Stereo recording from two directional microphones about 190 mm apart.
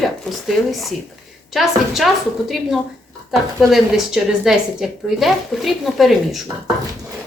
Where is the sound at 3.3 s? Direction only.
Centre (ahead or behind).